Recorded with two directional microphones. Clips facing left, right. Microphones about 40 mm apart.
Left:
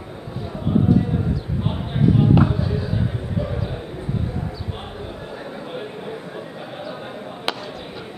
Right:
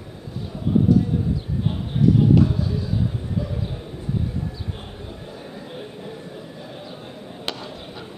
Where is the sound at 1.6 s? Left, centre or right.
Left.